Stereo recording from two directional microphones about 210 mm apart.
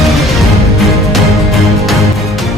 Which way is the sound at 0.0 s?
Centre (ahead or behind).